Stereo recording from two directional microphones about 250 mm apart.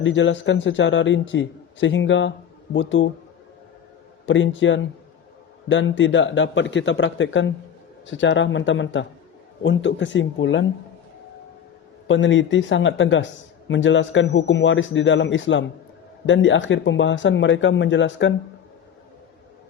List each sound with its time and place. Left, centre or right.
0.0 s a man's voice: left
4.3 s a man's voice: left
12.0 s a man's voice: left